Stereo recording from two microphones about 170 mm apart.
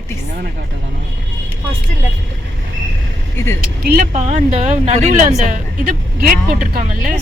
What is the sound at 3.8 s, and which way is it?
Speech, 60° right (ahead or behind).